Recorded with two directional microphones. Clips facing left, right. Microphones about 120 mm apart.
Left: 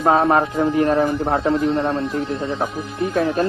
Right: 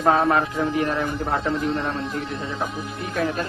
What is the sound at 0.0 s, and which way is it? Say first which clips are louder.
Speech: left 3 dB; 30° left (ahead or behind).